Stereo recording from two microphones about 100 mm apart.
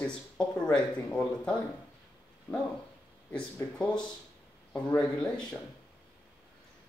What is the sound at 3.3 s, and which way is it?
Speech, 10° left (ahead or behind).